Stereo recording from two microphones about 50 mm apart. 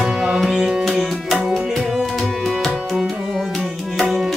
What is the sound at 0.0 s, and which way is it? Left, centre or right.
Music, centre.